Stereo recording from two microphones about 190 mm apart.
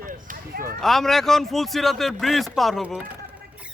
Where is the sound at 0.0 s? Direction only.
45° right (ahead or behind).